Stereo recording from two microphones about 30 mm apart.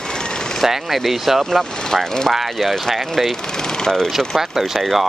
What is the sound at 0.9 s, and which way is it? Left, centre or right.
Speech, centre.